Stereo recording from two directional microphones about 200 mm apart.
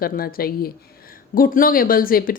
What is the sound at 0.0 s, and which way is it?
Speech, 45° left (ahead or behind).